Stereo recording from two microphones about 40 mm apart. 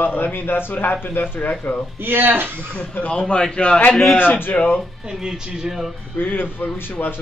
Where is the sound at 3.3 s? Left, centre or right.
Left.